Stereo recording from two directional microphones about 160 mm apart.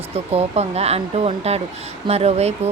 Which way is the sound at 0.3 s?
40° right (ahead or behind).